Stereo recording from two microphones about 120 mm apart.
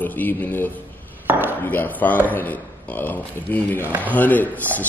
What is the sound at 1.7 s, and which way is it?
Speech, 15° left (ahead or behind).